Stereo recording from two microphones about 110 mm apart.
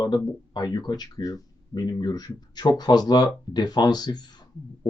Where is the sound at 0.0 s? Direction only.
40° left (ahead or behind).